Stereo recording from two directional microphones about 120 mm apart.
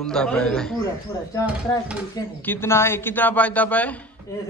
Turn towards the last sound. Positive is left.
turn(degrees=25)  # may be behind; listen again after turning